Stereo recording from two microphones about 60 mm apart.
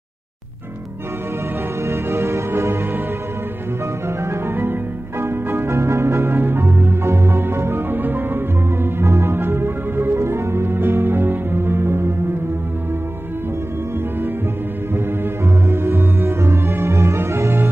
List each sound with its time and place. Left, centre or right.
1.9 s music: right
4.2 s music: right
5.8 s music: right
8.9 s music: right
15.7 s music: right